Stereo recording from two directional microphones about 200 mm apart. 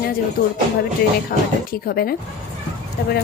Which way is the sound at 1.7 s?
50° left (ahead or behind).